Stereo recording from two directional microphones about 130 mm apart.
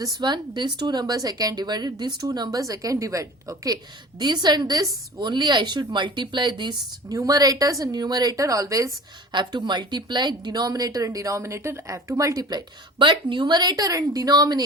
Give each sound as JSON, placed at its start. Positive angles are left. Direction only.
{"t": 0.0, "sound": "a woman's voice", "side_deg": -30}
{"t": 9.3, "sound": "speech", "side_deg": -35}